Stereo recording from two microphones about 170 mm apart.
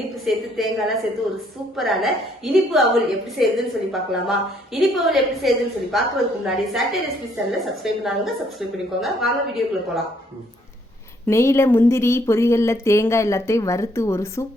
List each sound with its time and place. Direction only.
0.3 s a woman's voice: centre (ahead or behind)
11.3 s speech: 15° left (ahead or behind)